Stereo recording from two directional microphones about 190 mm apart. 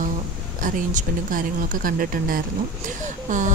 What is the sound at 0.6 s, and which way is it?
A woman's voice, 45° right (ahead or behind).